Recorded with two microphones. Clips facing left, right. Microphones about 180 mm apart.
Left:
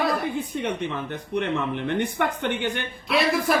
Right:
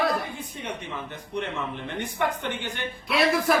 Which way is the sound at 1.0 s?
60° left (ahead or behind).